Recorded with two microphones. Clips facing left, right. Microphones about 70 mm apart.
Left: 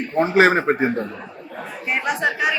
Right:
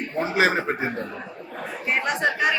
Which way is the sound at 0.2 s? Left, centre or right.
Left.